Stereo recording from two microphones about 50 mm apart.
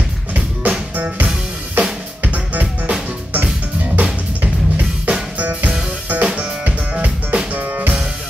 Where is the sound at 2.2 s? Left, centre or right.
Right.